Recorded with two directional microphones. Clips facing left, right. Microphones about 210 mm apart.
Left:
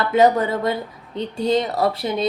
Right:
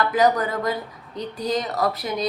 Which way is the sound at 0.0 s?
25° left (ahead or behind).